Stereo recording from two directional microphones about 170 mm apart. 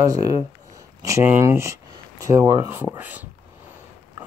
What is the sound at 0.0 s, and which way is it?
Speech, 20° right (ahead or behind).